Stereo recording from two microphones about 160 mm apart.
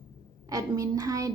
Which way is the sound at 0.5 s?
20° right (ahead or behind).